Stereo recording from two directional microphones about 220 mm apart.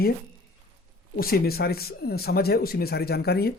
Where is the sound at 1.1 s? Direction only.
45° left (ahead or behind).